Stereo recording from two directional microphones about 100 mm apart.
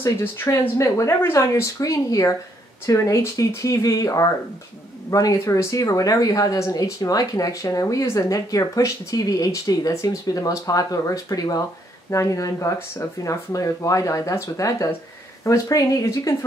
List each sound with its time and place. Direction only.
0.0 s speech: 20° left (ahead or behind)